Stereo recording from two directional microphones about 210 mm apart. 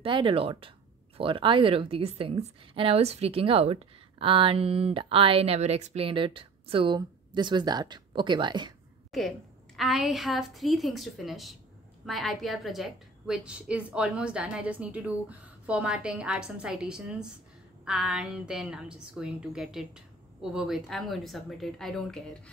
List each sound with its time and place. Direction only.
0.0 s a woman's voice: 25° right (ahead or behind)
9.8 s a woman's voice: centre (ahead or behind)